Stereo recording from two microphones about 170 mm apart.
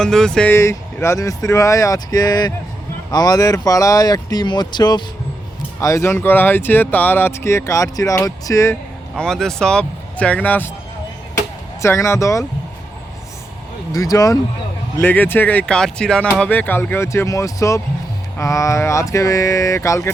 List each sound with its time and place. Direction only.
0.0 s speech: 5° left (ahead or behind)
0.5 s speech: 15° left (ahead or behind)
9.1 s speech: 5° left (ahead or behind)
11.8 s speech: 15° left (ahead or behind)
13.9 s speech: 20° left (ahead or behind)